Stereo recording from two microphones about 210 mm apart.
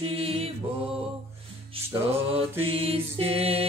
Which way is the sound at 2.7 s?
25° right (ahead or behind).